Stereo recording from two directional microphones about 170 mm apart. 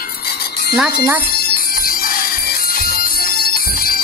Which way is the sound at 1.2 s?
60° left (ahead or behind).